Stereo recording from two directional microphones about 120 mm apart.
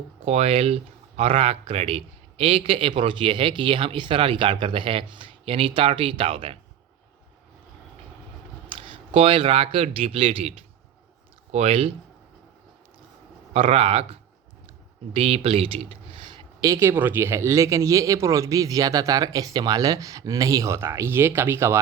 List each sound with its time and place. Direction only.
0.3 s speech: 60° right (ahead or behind)
8.7 s speech: 50° right (ahead or behind)
13.5 s speech: 60° right (ahead or behind); by 16.5 s 45° right (ahead or behind)
16.6 s a man's voice: 25° right (ahead or behind)